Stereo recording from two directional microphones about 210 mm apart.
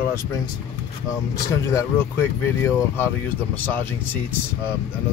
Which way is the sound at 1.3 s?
15° left (ahead or behind).